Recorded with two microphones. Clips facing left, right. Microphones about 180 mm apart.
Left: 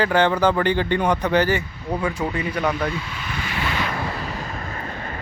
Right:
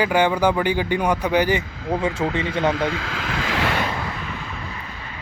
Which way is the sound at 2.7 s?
90° right.